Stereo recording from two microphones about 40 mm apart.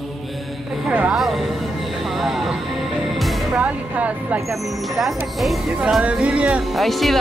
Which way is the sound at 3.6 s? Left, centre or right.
Right.